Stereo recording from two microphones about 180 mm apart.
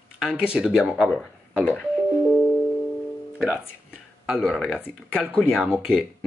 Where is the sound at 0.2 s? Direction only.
5° right (ahead or behind).